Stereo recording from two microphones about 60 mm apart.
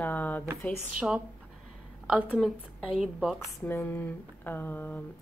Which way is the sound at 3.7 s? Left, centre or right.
Left.